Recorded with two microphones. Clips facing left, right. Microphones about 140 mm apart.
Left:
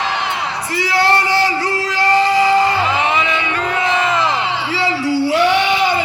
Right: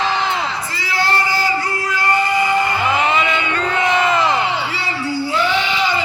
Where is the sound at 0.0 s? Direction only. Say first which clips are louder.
Right 1 dB; 60° left (ahead or behind); by 3.0 s 90° left.